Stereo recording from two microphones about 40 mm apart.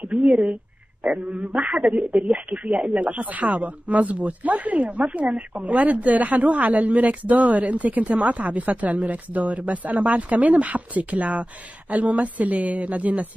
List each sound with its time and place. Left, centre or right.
0.0 s speech: right